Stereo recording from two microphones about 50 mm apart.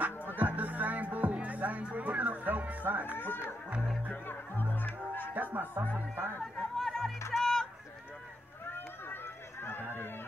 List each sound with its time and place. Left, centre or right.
0.4 s music: right
4.1 s music: left
5.3 s music: right
6.4 s a sound: centre
7.3 s music: centre
8.7 s run: left